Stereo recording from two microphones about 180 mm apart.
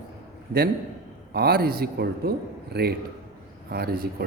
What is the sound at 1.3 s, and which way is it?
A man's voice, 60° right (ahead or behind).